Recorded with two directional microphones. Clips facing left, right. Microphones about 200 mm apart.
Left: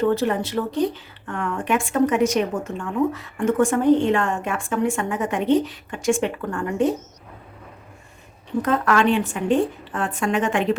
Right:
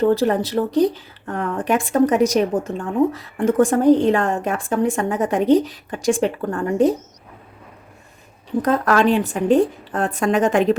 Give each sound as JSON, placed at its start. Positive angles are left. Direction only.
{"t": 0.0, "sound": "speech", "side_deg": -35}
{"t": 8.6, "sound": "speech", "side_deg": -40}